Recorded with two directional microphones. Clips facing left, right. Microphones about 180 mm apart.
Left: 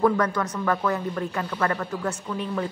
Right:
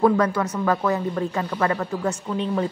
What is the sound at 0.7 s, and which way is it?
Speech, 20° right (ahead or behind).